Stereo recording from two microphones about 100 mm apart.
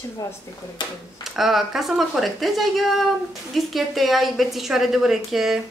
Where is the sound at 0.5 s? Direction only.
35° left (ahead or behind).